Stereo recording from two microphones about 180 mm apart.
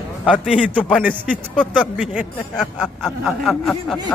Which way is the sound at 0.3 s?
5° right (ahead or behind).